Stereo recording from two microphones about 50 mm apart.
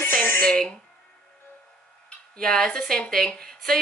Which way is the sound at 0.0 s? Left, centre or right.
Left.